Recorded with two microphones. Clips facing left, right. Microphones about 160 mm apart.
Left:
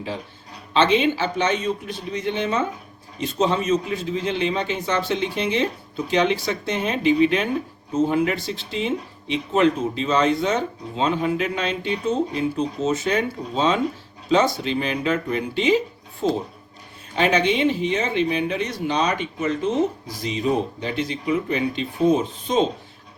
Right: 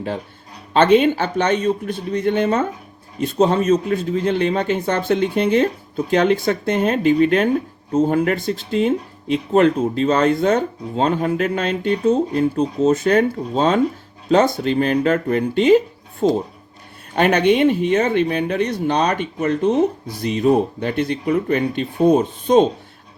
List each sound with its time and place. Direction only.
0.7 s speech: 50° right (ahead or behind)
3.3 s a man's voice: 40° right (ahead or behind)
3.7 s speech: 50° right (ahead or behind)
17.2 s speech: 55° right (ahead or behind)